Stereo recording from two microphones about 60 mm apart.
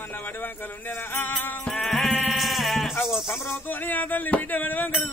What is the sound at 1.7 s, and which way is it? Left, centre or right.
Sheep, centre.